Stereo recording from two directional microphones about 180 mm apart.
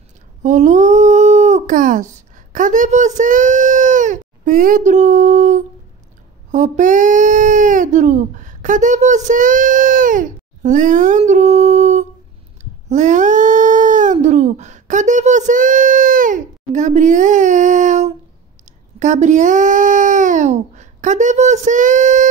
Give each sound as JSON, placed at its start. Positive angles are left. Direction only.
{"t": 0.4, "sound": "speech", "side_deg": -45}
{"t": 12.8, "sound": "dog", "side_deg": -40}
{"t": 18.7, "sound": "speech", "side_deg": -40}